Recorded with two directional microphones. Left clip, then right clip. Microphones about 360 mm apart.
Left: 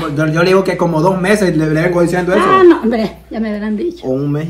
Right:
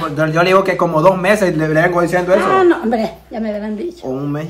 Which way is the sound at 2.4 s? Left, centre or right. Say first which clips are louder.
Left 4 dB; centre.